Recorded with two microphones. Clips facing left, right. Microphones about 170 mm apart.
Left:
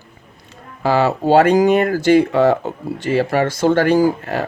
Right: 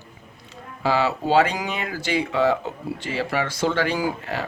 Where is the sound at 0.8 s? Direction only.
50° left (ahead or behind).